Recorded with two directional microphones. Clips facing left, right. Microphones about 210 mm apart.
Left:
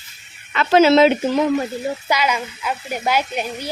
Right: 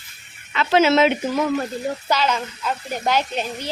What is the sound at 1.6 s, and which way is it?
Speech, 5° left (ahead or behind).